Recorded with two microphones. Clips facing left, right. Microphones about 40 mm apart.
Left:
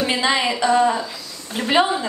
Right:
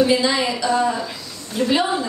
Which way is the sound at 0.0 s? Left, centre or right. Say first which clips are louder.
Right 2 dB; left.